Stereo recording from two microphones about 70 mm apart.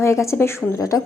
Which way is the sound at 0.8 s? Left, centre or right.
Left.